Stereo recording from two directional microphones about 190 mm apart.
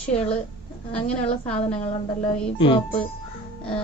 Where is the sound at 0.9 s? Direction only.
5° left (ahead or behind).